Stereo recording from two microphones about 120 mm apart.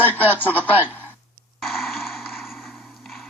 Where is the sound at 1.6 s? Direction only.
Centre (ahead or behind).